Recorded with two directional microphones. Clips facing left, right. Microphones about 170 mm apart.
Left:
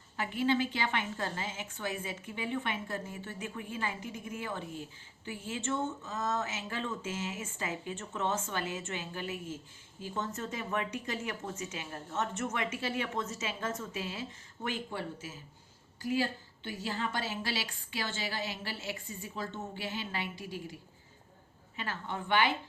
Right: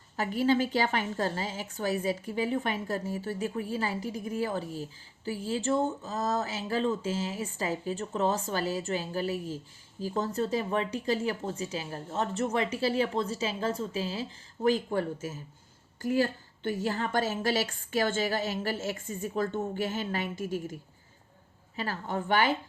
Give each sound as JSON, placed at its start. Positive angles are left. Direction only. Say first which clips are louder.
{"t": 0.2, "sound": "a woman's voice", "louder": "right 4 dB", "side_deg": -40}
{"t": 21.8, "sound": "a woman's voice", "louder": "right 6 dB", "side_deg": -40}